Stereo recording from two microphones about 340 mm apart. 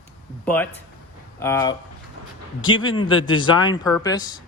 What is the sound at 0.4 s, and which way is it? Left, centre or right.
Speech, centre.